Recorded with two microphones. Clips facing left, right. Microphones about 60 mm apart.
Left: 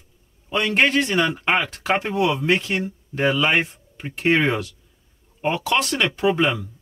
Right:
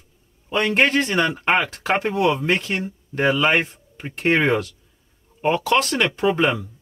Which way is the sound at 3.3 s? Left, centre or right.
Centre.